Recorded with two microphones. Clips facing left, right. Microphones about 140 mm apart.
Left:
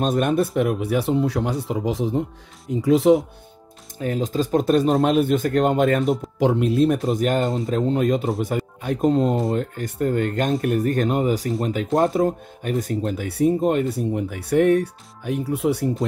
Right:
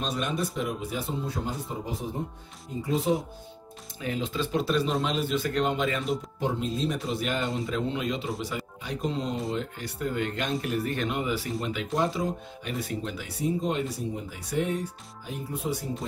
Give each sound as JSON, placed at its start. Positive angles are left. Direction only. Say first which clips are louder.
{"t": 0.0, "sound": "speech", "louder": "left 10 dB", "side_deg": 50}
{"t": 4.0, "sound": "speech", "louder": "left 7 dB", "side_deg": 45}
{"t": 6.4, "sound": "speech", "louder": "left 12 dB", "side_deg": 70}